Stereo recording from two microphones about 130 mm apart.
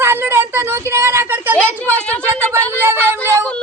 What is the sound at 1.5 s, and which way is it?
Speech, 10° left (ahead or behind).